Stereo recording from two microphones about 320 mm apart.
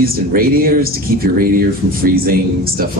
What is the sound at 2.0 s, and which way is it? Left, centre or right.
Speech, right.